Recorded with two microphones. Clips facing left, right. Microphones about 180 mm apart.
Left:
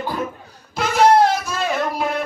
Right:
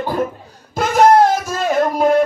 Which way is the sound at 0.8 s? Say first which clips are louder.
Right 3 dB; 50° right (ahead or behind).